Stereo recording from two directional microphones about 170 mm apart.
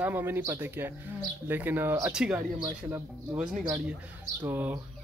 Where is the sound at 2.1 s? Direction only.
5° right (ahead or behind).